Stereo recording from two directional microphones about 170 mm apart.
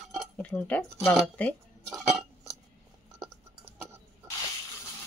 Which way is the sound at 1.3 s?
10° left (ahead or behind).